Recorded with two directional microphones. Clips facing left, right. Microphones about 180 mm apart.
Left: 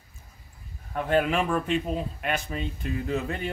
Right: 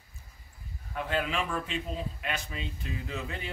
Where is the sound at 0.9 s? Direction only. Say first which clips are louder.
Left 7 dB; 50° left (ahead or behind).